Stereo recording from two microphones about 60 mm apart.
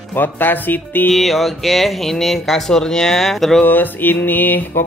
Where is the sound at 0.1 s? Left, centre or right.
Left.